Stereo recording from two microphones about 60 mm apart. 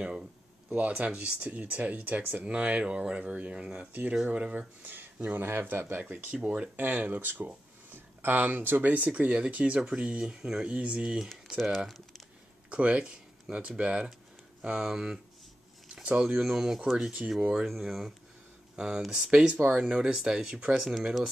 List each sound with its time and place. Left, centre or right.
0.0 s speech: centre
0.7 s speech: right
6.3 s speech: centre
6.8 s speech: right
11.4 s speech: centre
12.6 s speech: right
15.9 s a sound: centre
16.4 s speech: centre
17.6 s speech: centre